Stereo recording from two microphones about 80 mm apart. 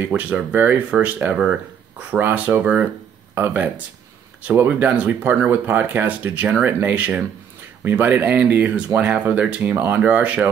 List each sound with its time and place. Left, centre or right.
0.2 s speech: centre